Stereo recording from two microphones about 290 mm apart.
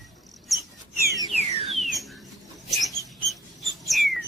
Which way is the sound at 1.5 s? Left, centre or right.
Centre.